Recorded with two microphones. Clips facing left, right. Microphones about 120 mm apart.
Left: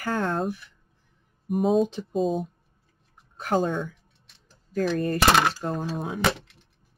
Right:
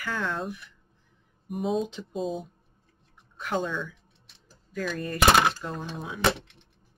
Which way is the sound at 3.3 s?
40° left (ahead or behind).